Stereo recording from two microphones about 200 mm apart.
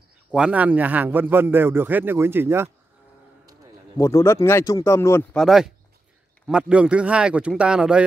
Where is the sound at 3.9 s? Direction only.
15° left (ahead or behind).